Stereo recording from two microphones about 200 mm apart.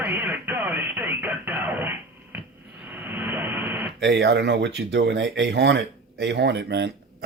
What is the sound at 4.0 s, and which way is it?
Speech, 60° right (ahead or behind).